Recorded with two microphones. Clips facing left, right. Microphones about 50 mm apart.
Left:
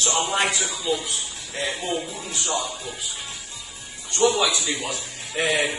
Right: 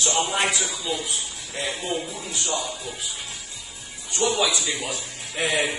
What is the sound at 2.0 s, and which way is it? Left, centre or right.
Speech, left.